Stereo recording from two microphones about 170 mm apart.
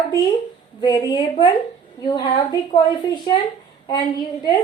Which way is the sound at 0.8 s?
25° left (ahead or behind).